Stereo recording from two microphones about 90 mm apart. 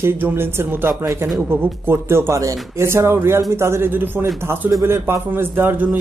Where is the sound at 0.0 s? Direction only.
25° right (ahead or behind).